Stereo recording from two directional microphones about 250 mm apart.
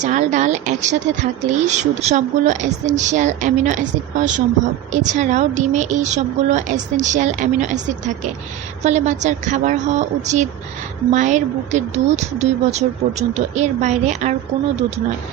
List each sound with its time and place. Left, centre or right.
0.0 s speech: right